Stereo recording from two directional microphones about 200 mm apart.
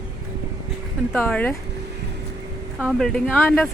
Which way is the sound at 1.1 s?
10° left (ahead or behind).